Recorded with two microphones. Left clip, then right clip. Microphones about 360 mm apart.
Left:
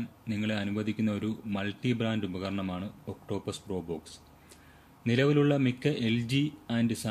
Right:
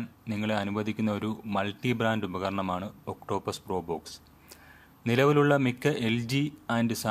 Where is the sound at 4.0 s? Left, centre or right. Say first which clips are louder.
Right 3 dB; centre.